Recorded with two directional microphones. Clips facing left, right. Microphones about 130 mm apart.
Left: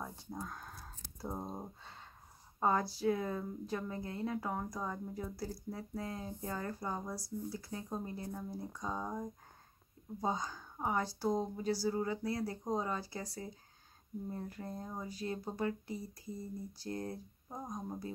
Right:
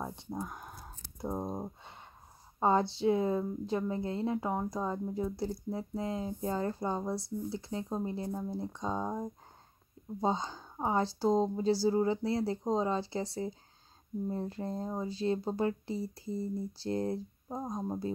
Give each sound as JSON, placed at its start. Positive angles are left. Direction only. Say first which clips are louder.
{"t": 0.0, "sound": "speech", "louder": "right 5 dB", "side_deg": -25}